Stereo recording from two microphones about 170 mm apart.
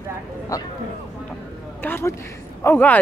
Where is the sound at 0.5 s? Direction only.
20° left (ahead or behind).